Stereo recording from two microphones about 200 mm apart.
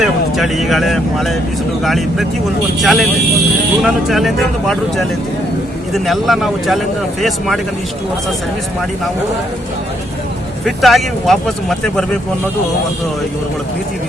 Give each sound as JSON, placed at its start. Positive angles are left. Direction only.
{"t": 0.0, "sound": "speech", "side_deg": 0}
{"t": 10.7, "sound": "speech", "side_deg": 0}